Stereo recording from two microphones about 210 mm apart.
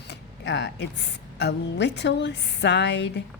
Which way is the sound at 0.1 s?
55° left (ahead or behind).